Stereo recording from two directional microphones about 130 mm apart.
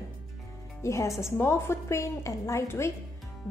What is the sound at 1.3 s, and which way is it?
A woman's voice, 20° left (ahead or behind).